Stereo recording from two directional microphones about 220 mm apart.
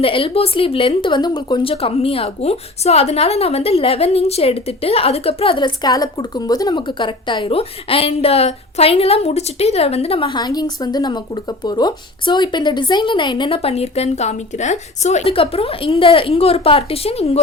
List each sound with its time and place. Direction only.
0.0 s a woman's voice: 25° left (ahead or behind)